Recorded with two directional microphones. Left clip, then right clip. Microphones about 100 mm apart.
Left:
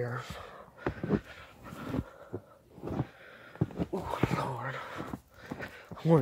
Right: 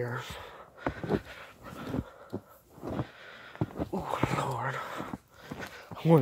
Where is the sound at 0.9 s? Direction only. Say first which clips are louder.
Right 1 dB; 40° right (ahead or behind).